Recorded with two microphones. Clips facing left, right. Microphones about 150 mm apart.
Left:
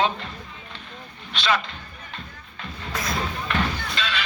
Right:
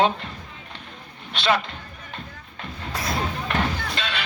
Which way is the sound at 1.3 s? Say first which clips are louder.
Right 2 dB; 55° right (ahead or behind).